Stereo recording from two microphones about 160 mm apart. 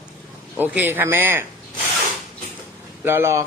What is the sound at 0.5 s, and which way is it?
Speech, 10° right (ahead or behind).